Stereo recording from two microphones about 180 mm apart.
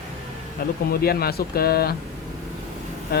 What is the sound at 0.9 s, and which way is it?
Speech, 55° left (ahead or behind).